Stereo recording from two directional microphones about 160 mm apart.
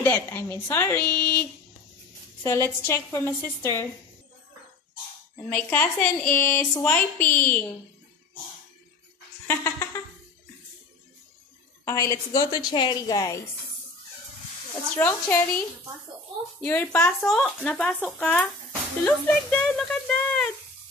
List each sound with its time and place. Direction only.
0.0 s a woman's voice: 10° left (ahead or behind)
5.5 s a woman's voice: 10° left (ahead or behind)
9.5 s a woman's voice: 20° left (ahead or behind)
11.8 s a woman's voice: 20° left (ahead or behind)
15.0 s a woman's voice: 10° left (ahead or behind)
16.6 s a woman's voice: 10° left (ahead or behind)